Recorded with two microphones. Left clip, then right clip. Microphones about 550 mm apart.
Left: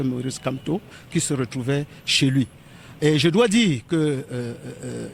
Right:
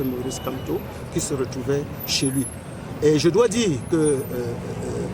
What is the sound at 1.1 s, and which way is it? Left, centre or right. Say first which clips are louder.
Speech: even; left.